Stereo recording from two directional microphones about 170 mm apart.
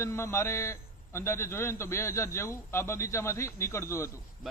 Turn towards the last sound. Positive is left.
turn(degrees=15)  # may be behind; listen again after turning